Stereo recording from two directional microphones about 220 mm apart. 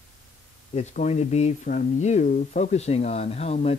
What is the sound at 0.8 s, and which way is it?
Speech, 30° left (ahead or behind).